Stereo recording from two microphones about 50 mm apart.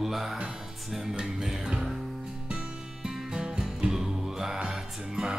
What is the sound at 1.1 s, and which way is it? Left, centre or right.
Music, centre.